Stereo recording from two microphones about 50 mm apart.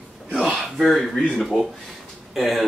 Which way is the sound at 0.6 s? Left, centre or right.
Centre.